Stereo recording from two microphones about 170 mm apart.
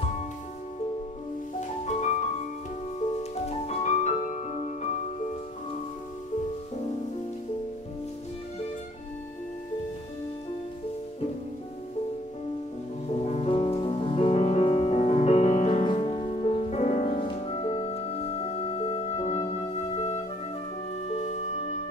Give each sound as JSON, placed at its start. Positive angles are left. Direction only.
{"t": 1.9, "sound": "music", "side_deg": 40}
{"t": 13.1, "sound": "music", "side_deg": 40}